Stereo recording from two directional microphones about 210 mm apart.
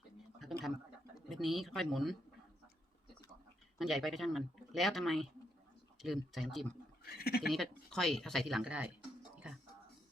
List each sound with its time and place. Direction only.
0.3 s a sound: centre (ahead or behind)
1.1 s speech: centre (ahead or behind)
3.8 s speech: centre (ahead or behind)
7.0 s speech: 45° left (ahead or behind)
7.5 s speech: centre (ahead or behind)